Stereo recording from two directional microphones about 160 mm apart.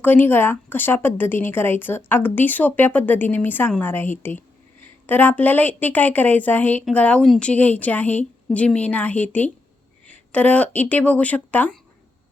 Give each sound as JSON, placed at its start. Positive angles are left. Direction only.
{"t": 0.0, "sound": "a woman's voice", "side_deg": 10}